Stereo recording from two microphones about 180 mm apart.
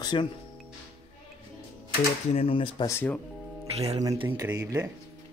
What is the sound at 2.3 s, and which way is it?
Speech, 30° left (ahead or behind).